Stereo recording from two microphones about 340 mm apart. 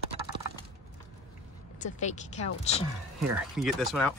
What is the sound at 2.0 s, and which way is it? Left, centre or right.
Speech, centre.